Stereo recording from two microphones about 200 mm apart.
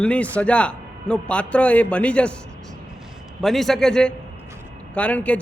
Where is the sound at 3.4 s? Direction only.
Centre (ahead or behind).